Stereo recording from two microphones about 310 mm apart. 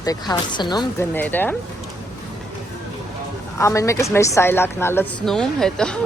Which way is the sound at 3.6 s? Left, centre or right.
Centre.